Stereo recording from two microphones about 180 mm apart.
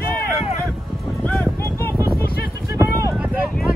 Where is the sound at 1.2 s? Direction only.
5° left (ahead or behind).